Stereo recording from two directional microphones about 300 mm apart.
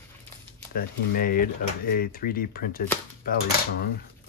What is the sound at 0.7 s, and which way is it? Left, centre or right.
Speech, left.